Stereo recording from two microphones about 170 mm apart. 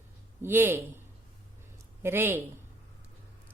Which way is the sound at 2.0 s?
15° right (ahead or behind).